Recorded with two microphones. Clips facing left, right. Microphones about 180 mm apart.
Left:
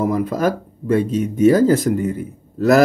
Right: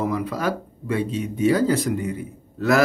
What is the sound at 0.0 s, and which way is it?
Speech, 45° left (ahead or behind).